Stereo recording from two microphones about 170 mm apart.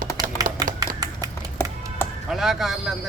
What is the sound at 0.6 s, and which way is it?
Typewriter, 25° right (ahead or behind).